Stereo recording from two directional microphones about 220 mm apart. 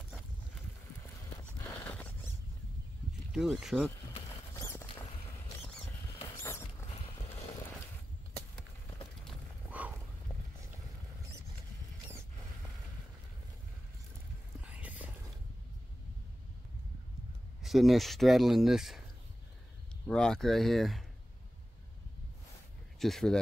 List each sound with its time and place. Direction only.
1.9 s rodents: 5° left (ahead or behind)
3.3 s speech: centre (ahead or behind)
4.6 s rodents: 10° left (ahead or behind)
6.2 s rodents: 15° left (ahead or behind)
9.3 s a sound: 5° right (ahead or behind)
14.6 s whispering: 5° right (ahead or behind)
17.6 s speech: centre (ahead or behind)
20.1 s speech: 5° left (ahead or behind)
22.9 s speech: centre (ahead or behind)